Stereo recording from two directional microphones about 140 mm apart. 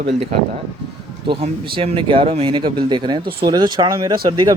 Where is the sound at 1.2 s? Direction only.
40° right (ahead or behind).